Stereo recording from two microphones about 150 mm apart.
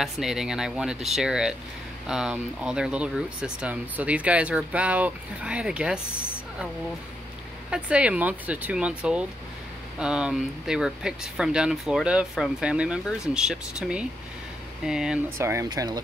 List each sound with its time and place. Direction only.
0.0 s speech: centre (ahead or behind)
7.7 s speech: 5° right (ahead or behind)
15.2 s speech: 15° right (ahead or behind)